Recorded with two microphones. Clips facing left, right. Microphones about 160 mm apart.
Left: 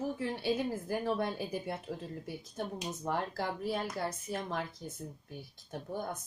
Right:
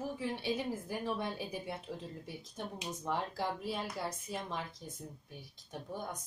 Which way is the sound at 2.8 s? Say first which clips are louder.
Left 1 dB; centre (ahead or behind).